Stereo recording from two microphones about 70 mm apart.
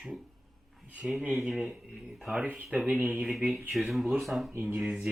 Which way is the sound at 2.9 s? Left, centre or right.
Right.